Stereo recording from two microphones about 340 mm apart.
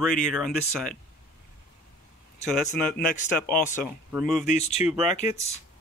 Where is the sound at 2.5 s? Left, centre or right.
Centre.